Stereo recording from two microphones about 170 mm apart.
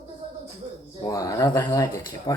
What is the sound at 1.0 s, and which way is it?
Speech, 20° left (ahead or behind).